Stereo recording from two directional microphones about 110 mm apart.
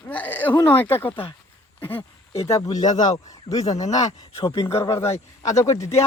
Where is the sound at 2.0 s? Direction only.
60° left (ahead or behind).